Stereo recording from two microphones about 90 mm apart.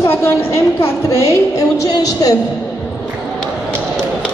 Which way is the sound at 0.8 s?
35° left (ahead or behind).